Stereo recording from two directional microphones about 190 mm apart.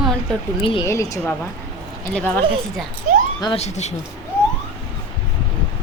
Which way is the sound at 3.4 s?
35° left (ahead or behind).